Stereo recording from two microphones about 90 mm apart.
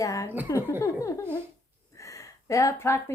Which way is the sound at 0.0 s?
40° left (ahead or behind).